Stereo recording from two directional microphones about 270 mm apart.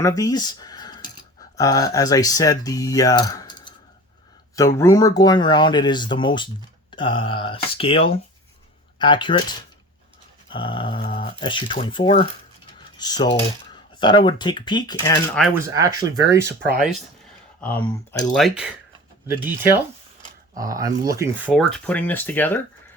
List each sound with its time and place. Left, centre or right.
0.0 s speech: centre
4.8 s speech: centre
15.5 s speech: centre
17.6 s speech: centre